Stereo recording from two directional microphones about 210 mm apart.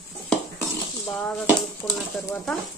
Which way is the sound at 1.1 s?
5° left (ahead or behind).